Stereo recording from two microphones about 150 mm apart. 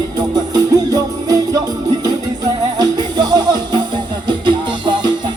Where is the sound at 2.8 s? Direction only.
30° right (ahead or behind).